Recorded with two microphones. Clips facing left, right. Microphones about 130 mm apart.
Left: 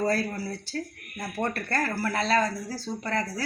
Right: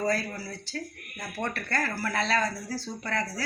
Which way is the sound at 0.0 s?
30° left (ahead or behind).